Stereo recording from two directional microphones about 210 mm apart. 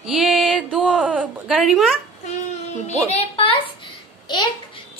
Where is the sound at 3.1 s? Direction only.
30° left (ahead or behind).